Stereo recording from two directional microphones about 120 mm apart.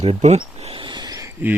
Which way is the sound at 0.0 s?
60° right (ahead or behind).